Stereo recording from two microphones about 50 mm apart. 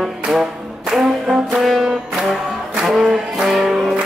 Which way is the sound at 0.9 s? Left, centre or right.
Centre.